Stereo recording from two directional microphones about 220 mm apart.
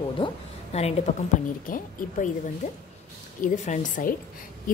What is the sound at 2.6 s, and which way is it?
A woman's voice, 30° left (ahead or behind).